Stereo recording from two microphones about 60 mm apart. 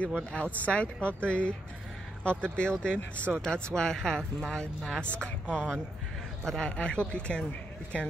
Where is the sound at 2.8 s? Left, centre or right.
Left.